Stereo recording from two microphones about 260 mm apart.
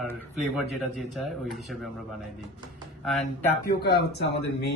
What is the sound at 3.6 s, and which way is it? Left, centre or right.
Speech, left.